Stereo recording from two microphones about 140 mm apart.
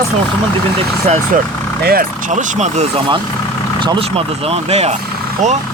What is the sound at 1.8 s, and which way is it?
Speech, 85° right.